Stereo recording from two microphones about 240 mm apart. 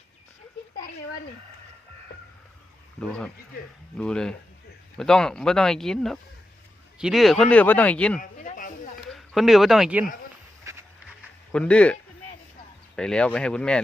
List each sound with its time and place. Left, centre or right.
3.0 s speech: centre
8.2 s a sound: left
9.1 s speech: centre
10.7 s a sound: centre
11.5 s speech: centre
13.0 s speech: centre